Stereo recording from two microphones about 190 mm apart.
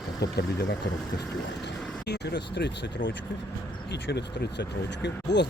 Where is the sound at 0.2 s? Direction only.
60° left (ahead or behind).